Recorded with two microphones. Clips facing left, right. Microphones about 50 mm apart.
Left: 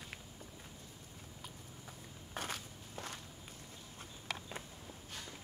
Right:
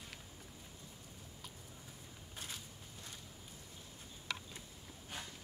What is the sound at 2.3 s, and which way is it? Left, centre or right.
Walk, left.